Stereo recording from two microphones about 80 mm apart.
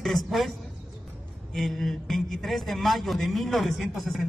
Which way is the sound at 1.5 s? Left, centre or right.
Centre.